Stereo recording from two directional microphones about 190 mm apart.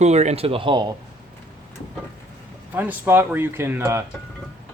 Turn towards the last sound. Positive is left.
turn(degrees=-15)  # may be behind; listen again after turning